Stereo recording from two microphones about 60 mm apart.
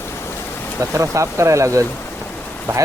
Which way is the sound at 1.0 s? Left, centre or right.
Right.